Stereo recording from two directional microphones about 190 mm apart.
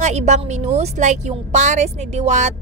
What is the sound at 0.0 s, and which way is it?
A woman's voice, 35° right (ahead or behind).